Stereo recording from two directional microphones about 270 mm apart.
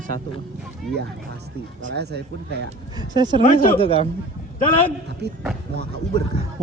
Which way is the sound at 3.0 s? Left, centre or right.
Centre.